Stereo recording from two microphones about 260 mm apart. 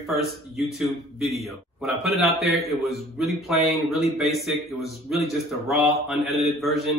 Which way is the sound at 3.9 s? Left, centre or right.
Centre.